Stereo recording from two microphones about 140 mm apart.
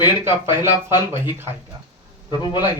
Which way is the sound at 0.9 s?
30° left (ahead or behind).